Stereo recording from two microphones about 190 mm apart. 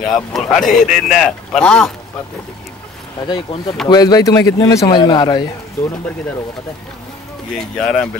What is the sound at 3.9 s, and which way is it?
A man's voice, 20° left (ahead or behind).